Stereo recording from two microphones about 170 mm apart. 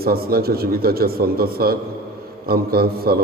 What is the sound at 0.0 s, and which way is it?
A man's voice, 65° right (ahead or behind).